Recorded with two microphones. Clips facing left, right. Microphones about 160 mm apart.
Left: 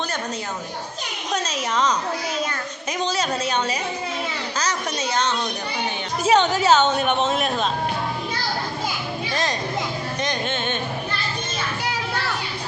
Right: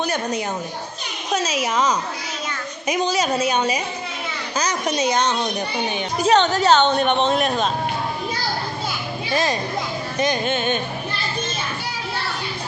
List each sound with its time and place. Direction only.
1.3 s a woman's voice: 5° right (ahead or behind)
6.1 s speech: 5° left (ahead or behind)
9.3 s a woman's voice: 5° right (ahead or behind)